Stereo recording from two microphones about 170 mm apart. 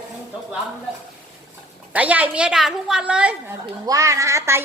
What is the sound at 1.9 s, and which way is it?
A woman's voice, 10° right (ahead or behind).